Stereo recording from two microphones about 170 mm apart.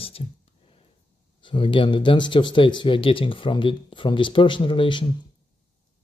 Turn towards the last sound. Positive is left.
turn(degrees=30)  # may be behind; listen again after turning